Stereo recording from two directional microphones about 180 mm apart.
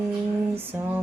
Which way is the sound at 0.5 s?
10° right (ahead or behind).